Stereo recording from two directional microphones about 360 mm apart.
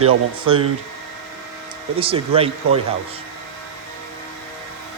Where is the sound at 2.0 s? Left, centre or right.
Centre.